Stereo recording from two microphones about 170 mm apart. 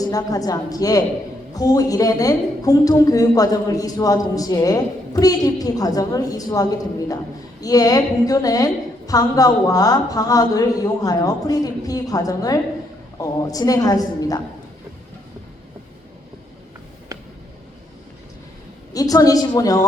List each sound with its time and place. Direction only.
0.0 s a woman's voice: 20° left (ahead or behind)
18.9 s a woman's voice: 20° left (ahead or behind)